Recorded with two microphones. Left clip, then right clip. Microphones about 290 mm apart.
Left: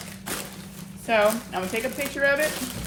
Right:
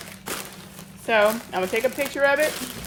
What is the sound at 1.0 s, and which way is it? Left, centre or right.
Speech, right.